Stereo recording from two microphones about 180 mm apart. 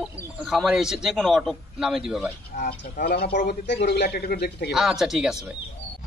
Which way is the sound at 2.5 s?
55° left (ahead or behind).